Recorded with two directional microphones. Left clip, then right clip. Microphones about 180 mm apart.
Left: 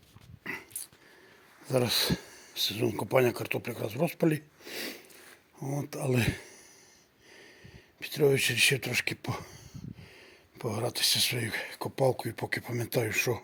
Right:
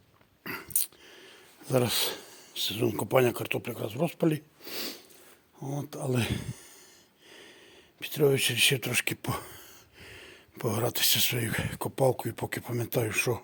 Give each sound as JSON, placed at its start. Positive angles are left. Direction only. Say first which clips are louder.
{"t": 0.4, "sound": "a sound", "louder": "even", "side_deg": -20}
{"t": 1.6, "sound": "speech", "louder": "even", "side_deg": -15}
{"t": 6.2, "sound": "speech", "louder": "even", "side_deg": -15}
{"t": 7.9, "sound": "speech", "louder": "even", "side_deg": -10}